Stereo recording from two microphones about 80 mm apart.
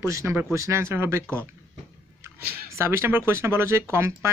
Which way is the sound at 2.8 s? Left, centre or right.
Right.